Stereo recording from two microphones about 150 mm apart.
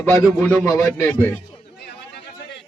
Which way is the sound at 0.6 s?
20° left (ahead or behind).